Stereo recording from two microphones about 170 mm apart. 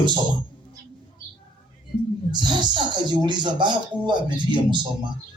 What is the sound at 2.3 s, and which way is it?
Speech, 25° right (ahead or behind).